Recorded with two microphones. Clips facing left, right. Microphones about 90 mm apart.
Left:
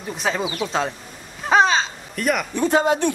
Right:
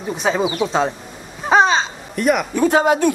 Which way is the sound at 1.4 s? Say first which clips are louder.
Right 2 dB; centre (ahead or behind).